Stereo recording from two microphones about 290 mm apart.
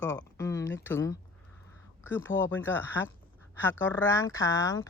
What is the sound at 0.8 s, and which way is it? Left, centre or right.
Speech, centre.